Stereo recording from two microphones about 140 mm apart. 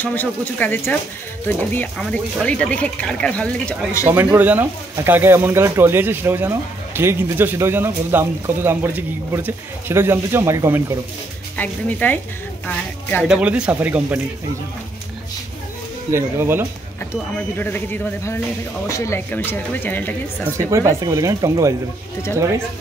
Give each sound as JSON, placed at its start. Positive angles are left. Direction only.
{"t": 0.0, "sound": "speech", "side_deg": 15}
{"t": 4.0, "sound": "speech", "side_deg": -15}
{"t": 11.5, "sound": "speech", "side_deg": 10}
{"t": 13.3, "sound": "speech", "side_deg": -10}
{"t": 16.1, "sound": "speech", "side_deg": -20}
{"t": 17.4, "sound": "speech", "side_deg": 15}
{"t": 20.5, "sound": "speech", "side_deg": -20}